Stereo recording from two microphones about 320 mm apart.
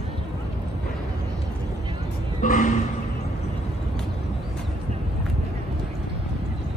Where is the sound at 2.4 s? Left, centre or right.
Left.